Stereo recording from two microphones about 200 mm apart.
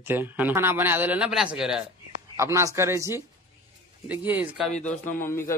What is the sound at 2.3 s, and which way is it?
Speech, 15° right (ahead or behind).